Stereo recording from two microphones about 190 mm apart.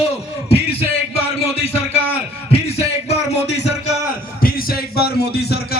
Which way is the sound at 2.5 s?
35° left (ahead or behind).